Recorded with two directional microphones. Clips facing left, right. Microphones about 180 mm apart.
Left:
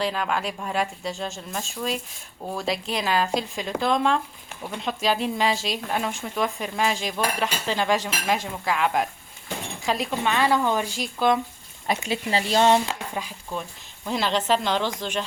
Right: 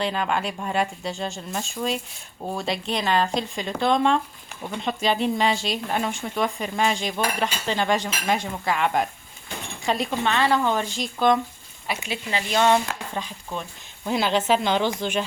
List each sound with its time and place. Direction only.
0.0 s speech: centre (ahead or behind)
11.9 s speech: 40° left (ahead or behind)
13.1 s speech: 5° left (ahead or behind)